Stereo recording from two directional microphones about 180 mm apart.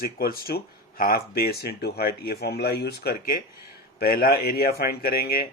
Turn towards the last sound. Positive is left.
turn(degrees=55)  # may be behind; listen again after turning